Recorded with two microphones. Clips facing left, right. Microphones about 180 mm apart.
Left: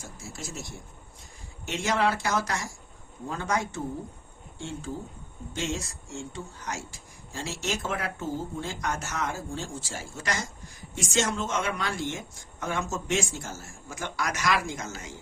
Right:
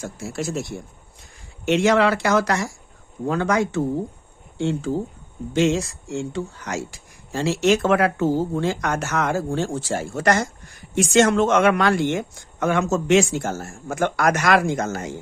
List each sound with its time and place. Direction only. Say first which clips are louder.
0.0 s speech: right 12 dB; 75° right (ahead or behind)
3.2 s speech: right 9 dB; 85° right; by 15.1 s 60° right (ahead or behind)